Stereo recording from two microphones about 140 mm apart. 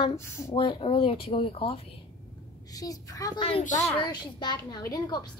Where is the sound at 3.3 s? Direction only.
40° left (ahead or behind).